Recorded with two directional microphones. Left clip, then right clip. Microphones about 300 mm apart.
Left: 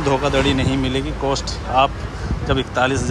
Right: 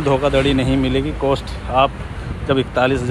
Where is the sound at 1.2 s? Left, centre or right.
Centre.